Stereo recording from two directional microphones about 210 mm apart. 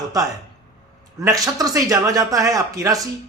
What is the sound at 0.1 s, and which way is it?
A man's voice, 15° right (ahead or behind).